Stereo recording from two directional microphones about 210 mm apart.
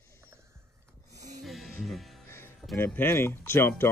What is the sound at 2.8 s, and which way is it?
Speech, 10° left (ahead or behind).